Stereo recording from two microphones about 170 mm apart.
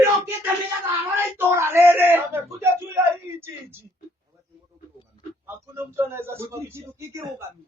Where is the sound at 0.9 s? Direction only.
10° right (ahead or behind).